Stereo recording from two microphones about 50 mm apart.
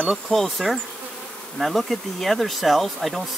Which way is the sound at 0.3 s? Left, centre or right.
Centre.